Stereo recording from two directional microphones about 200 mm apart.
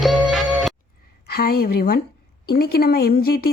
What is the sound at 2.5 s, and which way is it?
Speech, 50° left (ahead or behind).